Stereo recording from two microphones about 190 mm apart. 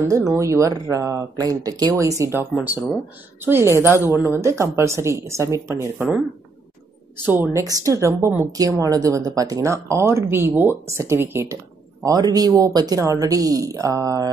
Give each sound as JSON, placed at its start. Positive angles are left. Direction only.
{"t": 0.1, "sound": "a woman's voice", "side_deg": -15}
{"t": 3.4, "sound": "a woman's voice", "side_deg": -15}
{"t": 7.2, "sound": "a woman's voice", "side_deg": -10}